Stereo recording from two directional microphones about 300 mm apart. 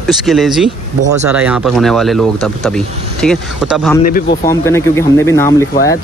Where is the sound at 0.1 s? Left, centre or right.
Centre.